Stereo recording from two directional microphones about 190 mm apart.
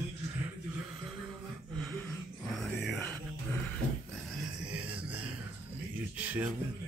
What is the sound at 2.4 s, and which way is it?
Music, centre (ahead or behind).